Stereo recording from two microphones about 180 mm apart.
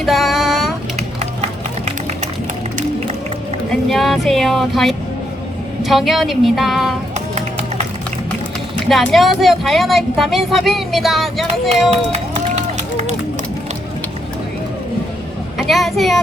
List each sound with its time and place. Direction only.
0.0 s a sound: centre (ahead or behind)
1.2 s run: 40° right (ahead or behind)
3.8 s music: centre (ahead or behind)
5.8 s speech: centre (ahead or behind)
8.9 s speech: centre (ahead or behind)
15.5 s a child's voice: centre (ahead or behind)